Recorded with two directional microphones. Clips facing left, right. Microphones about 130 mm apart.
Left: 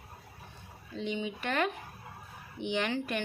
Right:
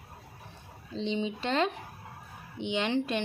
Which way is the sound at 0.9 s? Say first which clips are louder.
Right 3 dB; 25° right (ahead or behind).